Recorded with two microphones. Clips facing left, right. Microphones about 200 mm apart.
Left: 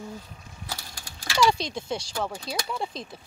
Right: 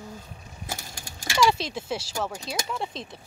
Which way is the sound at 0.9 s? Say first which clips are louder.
Right 3 dB; 45° right (ahead or behind).